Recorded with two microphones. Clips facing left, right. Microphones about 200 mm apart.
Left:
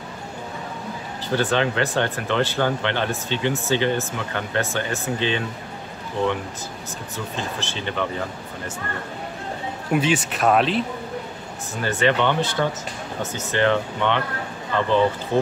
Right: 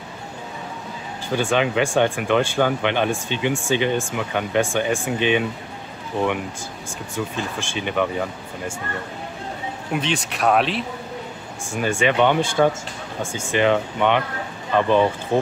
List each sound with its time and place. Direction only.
1.3 s speech: 15° right (ahead or behind)
7.3 s speech: 15° right (ahead or behind)
9.9 s speech: 5° left (ahead or behind)
11.7 s speech: 10° right (ahead or behind)